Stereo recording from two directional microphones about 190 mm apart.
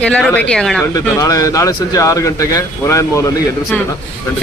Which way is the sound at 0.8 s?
20° left (ahead or behind).